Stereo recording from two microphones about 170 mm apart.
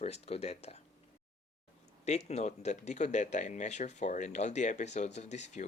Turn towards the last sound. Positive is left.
turn(degrees=45)  # may be behind; listen again after turning